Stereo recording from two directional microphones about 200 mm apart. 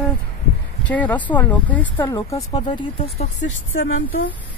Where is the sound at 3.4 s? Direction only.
80° left.